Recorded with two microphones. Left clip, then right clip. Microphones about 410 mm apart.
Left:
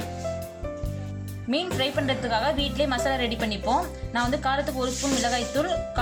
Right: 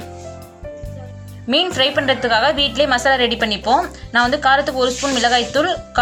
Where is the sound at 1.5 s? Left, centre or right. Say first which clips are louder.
Right 10 dB; right.